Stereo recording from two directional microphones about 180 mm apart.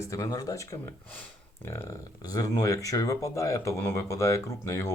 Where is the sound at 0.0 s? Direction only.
15° left (ahead or behind).